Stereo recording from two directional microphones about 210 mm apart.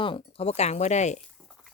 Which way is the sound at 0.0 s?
25° left (ahead or behind).